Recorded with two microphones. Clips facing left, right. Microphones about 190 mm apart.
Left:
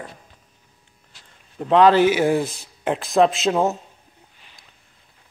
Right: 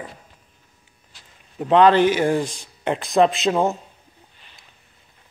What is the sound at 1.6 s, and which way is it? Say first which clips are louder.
Speech: even; centre (ahead or behind).